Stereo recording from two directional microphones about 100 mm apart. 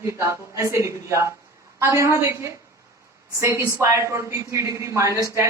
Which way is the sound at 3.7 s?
30° right (ahead or behind).